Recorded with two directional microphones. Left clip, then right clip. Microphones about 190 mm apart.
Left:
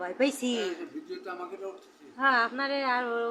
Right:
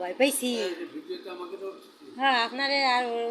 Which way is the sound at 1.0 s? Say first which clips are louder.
Right 1 dB; 30° left (ahead or behind).